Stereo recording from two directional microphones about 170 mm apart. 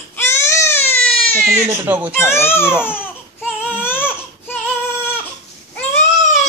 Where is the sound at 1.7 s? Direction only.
10° right (ahead or behind).